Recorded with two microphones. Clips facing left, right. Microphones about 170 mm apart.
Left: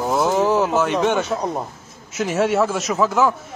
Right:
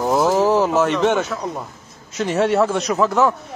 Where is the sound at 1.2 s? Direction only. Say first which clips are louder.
Left 3 dB; 30° left (ahead or behind).